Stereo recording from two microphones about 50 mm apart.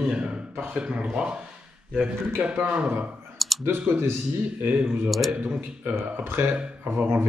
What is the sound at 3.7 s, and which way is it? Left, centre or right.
Speech, right.